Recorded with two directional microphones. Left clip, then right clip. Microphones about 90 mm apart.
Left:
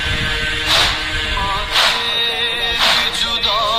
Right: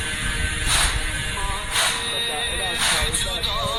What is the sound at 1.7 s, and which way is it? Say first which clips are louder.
Music: left 7 dB; 25° left (ahead or behind).